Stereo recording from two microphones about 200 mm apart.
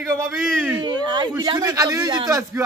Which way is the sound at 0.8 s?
20° right (ahead or behind).